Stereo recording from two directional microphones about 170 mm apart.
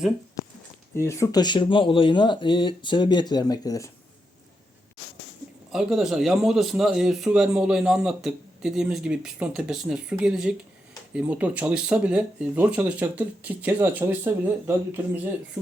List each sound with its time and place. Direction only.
0.9 s speech: 15° left (ahead or behind)
5.7 s speech: 5° right (ahead or behind)